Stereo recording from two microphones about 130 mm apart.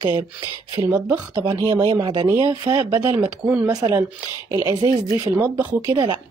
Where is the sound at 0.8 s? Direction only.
15° right (ahead or behind).